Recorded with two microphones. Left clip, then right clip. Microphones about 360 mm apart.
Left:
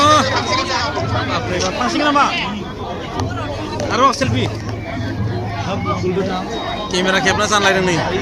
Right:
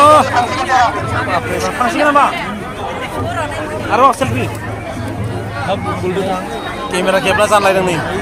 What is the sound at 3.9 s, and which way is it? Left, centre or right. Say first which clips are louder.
Speech: right 4 dB; centre.